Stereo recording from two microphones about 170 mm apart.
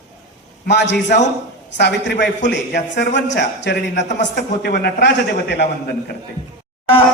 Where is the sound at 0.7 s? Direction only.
90° left.